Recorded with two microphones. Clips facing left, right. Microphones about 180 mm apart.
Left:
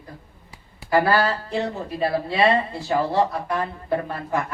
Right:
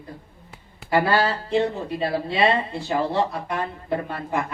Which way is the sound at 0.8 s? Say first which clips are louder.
Left 1 dB; 25° right (ahead or behind).